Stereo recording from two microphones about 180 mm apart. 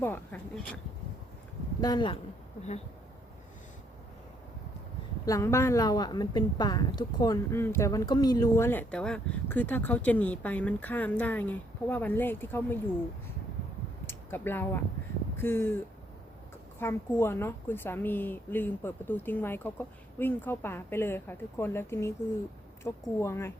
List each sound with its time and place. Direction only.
0.0 s speech: 10° left (ahead or behind)
1.8 s speech: 25° left (ahead or behind)
5.2 s a woman's voice: 15° left (ahead or behind)
14.1 s a woman's voice: 10° left (ahead or behind)
16.8 s a woman's voice: 15° left (ahead or behind)